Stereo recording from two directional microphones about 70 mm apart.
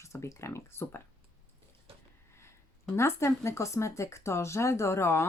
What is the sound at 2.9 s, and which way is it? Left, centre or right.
Speech, left.